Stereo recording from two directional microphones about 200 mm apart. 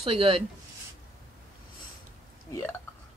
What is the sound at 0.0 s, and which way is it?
Speech, 30° right (ahead or behind).